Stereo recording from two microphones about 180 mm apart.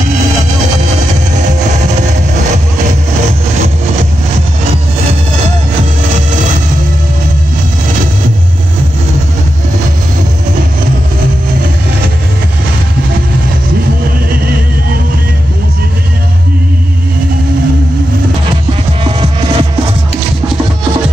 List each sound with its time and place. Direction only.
19.0 s music: 30° right (ahead or behind)